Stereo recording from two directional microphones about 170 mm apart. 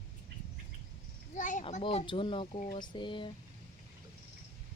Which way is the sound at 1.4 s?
50° left (ahead or behind).